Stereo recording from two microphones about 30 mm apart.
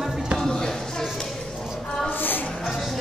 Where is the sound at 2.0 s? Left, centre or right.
Left.